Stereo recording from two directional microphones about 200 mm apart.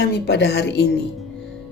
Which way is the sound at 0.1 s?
55° left (ahead or behind).